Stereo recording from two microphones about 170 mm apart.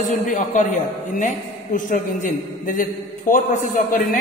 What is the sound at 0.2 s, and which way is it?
A man's voice, 45° left (ahead or behind).